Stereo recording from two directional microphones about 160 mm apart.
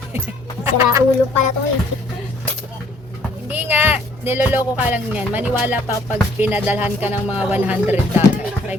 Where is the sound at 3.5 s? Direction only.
10° right (ahead or behind).